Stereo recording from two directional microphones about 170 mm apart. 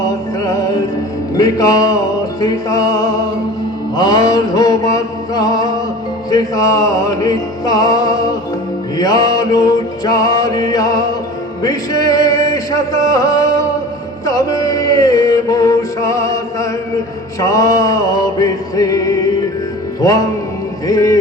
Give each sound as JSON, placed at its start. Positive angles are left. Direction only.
{"t": 0.0, "sound": "music", "side_deg": 20}
{"t": 3.9, "sound": "mantra", "side_deg": 25}
{"t": 6.3, "sound": "music", "side_deg": 20}